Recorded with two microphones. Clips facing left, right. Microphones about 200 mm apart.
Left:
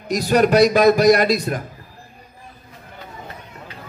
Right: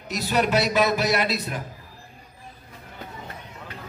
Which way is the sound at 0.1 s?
45° left (ahead or behind).